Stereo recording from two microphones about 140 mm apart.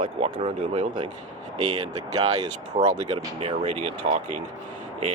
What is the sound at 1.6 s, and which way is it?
Speech, 25° right (ahead or behind).